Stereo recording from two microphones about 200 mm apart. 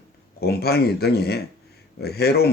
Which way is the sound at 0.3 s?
50° left (ahead or behind).